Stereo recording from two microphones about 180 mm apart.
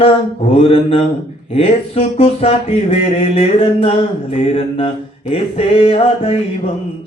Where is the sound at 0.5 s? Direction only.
30° left (ahead or behind).